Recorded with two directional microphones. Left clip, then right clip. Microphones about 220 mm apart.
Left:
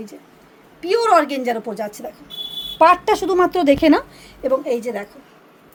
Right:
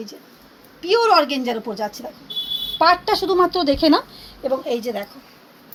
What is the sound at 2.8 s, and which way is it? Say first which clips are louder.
Speech: left 3 dB; 25° left (ahead or behind).